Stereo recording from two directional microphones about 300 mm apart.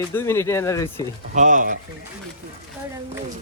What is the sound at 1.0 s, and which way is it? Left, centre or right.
Speech, right.